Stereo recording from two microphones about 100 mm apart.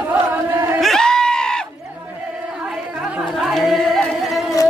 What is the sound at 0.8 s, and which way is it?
Goat, 5° left (ahead or behind).